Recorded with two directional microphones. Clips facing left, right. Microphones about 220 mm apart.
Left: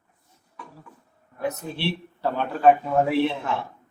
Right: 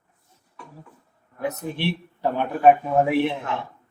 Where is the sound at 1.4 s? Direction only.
15° right (ahead or behind).